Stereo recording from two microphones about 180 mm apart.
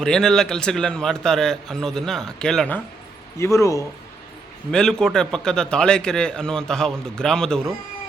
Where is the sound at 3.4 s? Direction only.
15° left (ahead or behind).